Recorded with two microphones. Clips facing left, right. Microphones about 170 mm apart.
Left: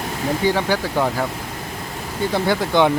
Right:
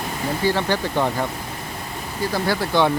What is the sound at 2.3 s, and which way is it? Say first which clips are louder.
Speech: left 2 dB; 20° left (ahead or behind).